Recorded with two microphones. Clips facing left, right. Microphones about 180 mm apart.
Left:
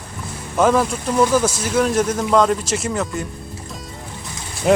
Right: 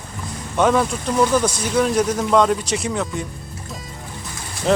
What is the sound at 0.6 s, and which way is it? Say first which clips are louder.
Speech: left 1 dB; centre (ahead or behind).